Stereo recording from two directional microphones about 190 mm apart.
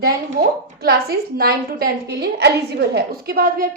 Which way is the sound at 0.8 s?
55° right (ahead or behind).